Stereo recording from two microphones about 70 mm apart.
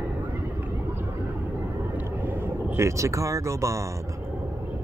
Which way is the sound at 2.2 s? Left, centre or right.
Right.